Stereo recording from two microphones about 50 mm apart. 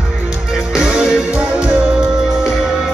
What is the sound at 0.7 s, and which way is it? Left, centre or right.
Music, centre.